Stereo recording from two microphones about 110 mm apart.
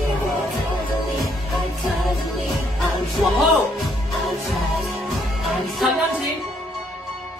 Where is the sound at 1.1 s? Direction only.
Centre (ahead or behind).